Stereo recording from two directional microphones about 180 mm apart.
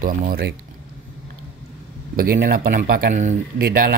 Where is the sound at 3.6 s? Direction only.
60° right (ahead or behind).